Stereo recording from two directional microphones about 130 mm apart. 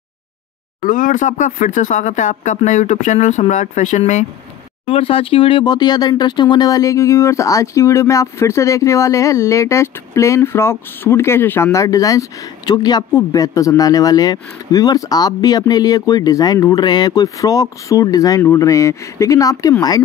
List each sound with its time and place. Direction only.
0.8 s speech: 90° left; by 4.3 s 70° left (ahead or behind)
4.8 s speech: 45° left (ahead or behind); by 19.7 s 25° left (ahead or behind)